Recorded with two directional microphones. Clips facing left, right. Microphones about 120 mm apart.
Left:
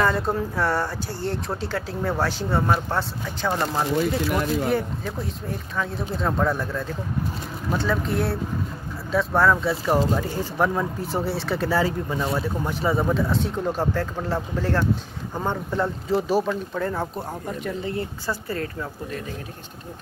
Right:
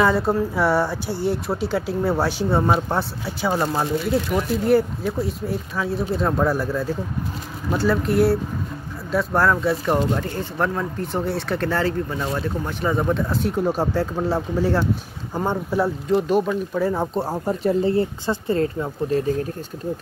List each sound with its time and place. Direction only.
0.0 s speech: 5° right (ahead or behind)
13.7 s speech: 15° right (ahead or behind)
16.2 s speech: 5° left (ahead or behind)
16.4 s speech: 5° right (ahead or behind)
17.1 s speech: 30° right (ahead or behind)